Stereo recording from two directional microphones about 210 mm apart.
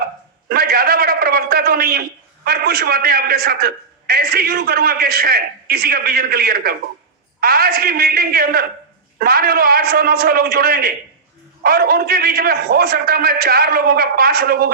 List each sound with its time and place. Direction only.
0.4 s a man's voice: 45° right (ahead or behind)